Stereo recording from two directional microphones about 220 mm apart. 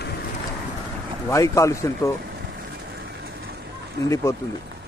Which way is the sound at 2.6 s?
45° right (ahead or behind).